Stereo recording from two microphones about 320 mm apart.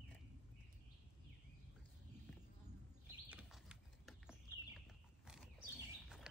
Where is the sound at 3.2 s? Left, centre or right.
Centre.